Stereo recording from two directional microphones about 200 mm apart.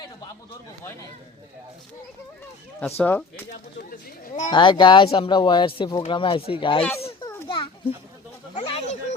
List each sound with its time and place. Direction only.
3.0 s speech: 10° left (ahead or behind)
3.5 s speech: 55° left (ahead or behind)
4.5 s speech: 25° left (ahead or behind)
7.0 s children playing: 25° left (ahead or behind)
8.5 s a sound: 30° left (ahead or behind)